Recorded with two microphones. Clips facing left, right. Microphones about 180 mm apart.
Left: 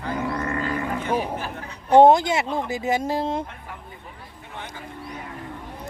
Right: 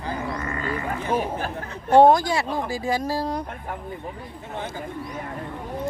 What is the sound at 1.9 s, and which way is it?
Speech, 20° left (ahead or behind).